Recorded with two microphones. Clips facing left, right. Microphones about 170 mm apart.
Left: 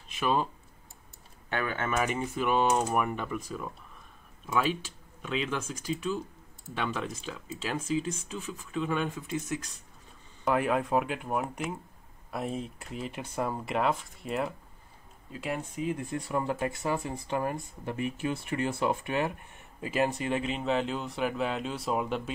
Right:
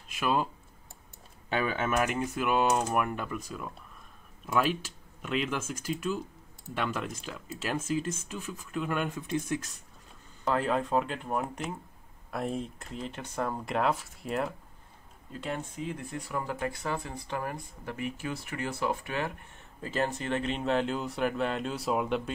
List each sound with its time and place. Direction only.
0.1 s speech: 5° right (ahead or behind)
1.5 s speech: 15° right (ahead or behind)
2.0 s speech: centre (ahead or behind)
4.5 s speech: 5° right (ahead or behind)
10.4 s speech: 15° left (ahead or behind)
16.2 s speech: 25° left (ahead or behind); by 22.3 s centre (ahead or behind)